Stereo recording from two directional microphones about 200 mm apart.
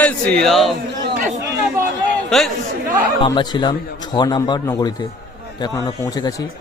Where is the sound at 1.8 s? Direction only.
15° right (ahead or behind).